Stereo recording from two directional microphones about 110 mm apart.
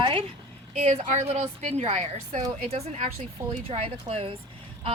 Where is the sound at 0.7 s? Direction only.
90° right.